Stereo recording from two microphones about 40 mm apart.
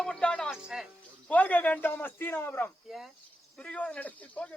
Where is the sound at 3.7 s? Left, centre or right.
Left.